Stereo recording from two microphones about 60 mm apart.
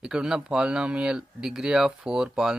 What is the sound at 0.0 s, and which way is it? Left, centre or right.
Speech, centre.